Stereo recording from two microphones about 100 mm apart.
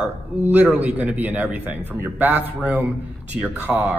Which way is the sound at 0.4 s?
15° right (ahead or behind).